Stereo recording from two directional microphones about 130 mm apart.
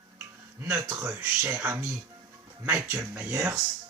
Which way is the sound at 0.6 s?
20° right (ahead or behind).